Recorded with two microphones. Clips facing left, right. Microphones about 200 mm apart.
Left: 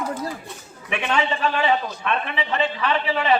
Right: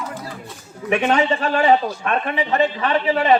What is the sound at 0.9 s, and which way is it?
A man's voice, 40° right (ahead or behind).